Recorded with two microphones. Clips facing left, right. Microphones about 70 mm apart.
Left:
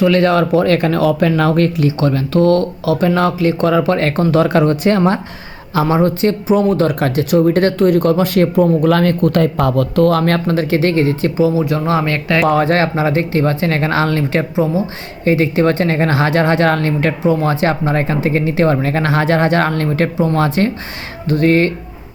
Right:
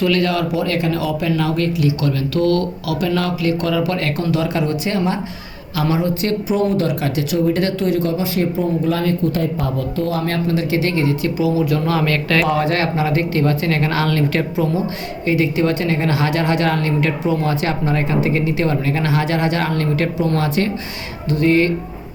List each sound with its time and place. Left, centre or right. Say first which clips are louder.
0.0 s a woman's voice: left 5 dB; left
6.2 s speech: left 5 dB; left
10.5 s a woman's voice: left 3 dB; left
12.5 s a woman's voice: left 4 dB; left
15.2 s a woman's voice: left 4 dB; left